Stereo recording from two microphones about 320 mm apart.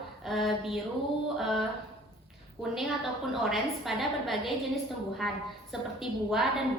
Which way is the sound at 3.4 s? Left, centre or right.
Centre.